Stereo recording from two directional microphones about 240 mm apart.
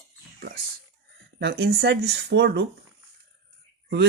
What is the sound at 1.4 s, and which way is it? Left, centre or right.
Speech, right.